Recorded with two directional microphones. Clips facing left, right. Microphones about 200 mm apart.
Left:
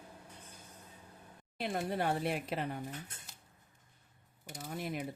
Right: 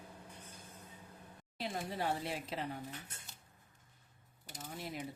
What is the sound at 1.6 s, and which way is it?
Speech, 60° left (ahead or behind).